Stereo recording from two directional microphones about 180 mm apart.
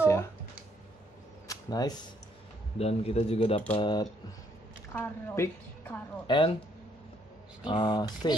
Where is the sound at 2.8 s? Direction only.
35° left (ahead or behind).